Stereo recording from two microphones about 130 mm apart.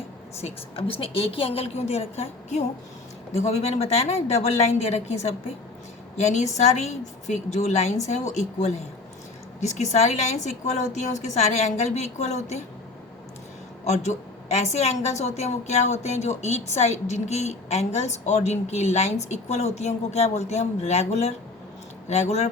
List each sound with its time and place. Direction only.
0.4 s a woman's voice: 45° left (ahead or behind)
13.8 s a woman's voice: 60° left (ahead or behind)